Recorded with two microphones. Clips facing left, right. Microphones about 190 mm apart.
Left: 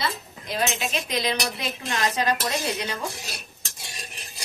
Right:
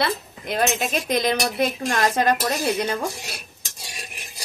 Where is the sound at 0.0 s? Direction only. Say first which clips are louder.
Right 6 dB; 60° right (ahead or behind).